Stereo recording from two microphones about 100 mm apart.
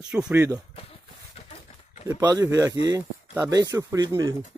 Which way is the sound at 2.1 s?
40° right (ahead or behind).